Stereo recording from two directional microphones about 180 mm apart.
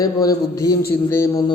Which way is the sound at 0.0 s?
20° left (ahead or behind).